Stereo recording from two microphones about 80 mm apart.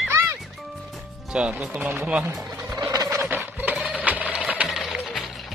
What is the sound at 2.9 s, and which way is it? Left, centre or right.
Turkey, right.